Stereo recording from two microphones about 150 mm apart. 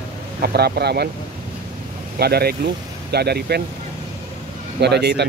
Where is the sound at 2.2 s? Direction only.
90° right.